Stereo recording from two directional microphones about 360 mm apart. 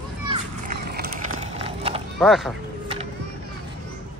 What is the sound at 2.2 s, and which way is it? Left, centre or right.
Speech, centre.